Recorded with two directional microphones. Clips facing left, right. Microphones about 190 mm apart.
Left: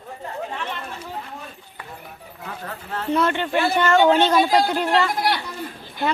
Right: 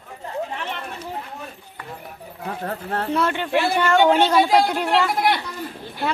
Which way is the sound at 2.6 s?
45° right (ahead or behind).